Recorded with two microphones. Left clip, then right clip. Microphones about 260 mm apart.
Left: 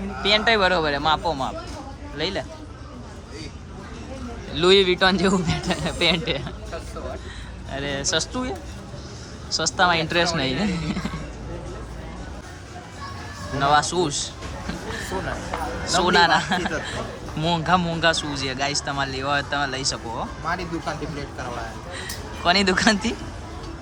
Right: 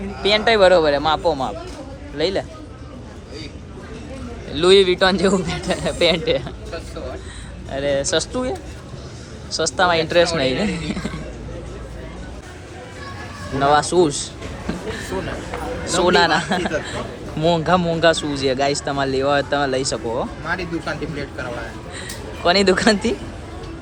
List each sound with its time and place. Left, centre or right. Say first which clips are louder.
0.2 s a man's voice: right 4 dB; centre
4.5 s a man's voice: right 4 dB; centre
7.7 s a man's voice: right 6 dB; centre
13.6 s a man's voice: right 4 dB; centre
22.4 s a man's voice: right 3 dB; centre